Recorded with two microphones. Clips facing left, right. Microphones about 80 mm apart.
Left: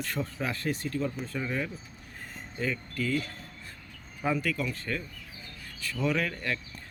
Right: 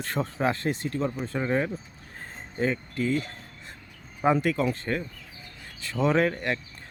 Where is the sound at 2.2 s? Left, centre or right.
Right.